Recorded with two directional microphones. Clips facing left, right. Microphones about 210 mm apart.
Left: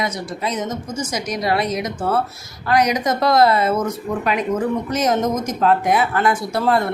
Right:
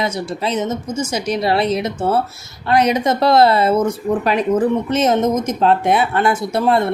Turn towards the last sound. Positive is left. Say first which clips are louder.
# right 3 dB
turn(degrees=-25)  # may be behind; listen again after turning